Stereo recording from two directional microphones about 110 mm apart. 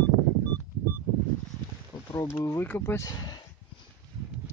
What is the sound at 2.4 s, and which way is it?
Speech, 20° left (ahead or behind).